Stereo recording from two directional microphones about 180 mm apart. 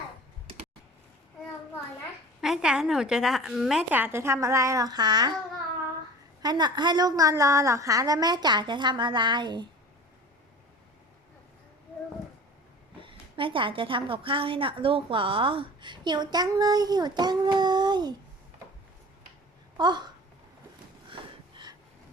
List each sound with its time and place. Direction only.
2.4 s a woman's voice: 5° right (ahead or behind); by 5.3 s 25° right (ahead or behind)
6.4 s a woman's voice: 25° right (ahead or behind)
13.0 s a woman's voice: 30° right (ahead or behind)
19.7 s speech: 25° right (ahead or behind)